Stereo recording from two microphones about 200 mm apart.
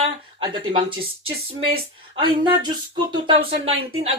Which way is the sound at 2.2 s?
20° right (ahead or behind).